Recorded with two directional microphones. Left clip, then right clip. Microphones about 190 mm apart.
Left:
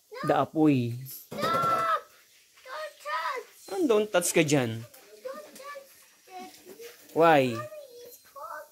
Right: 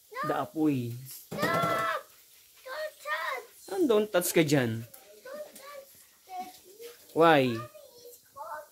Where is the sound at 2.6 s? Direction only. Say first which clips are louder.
Even; centre (ahead or behind).